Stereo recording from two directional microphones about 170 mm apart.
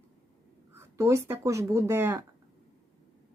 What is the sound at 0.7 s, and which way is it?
Speech, 15° right (ahead or behind).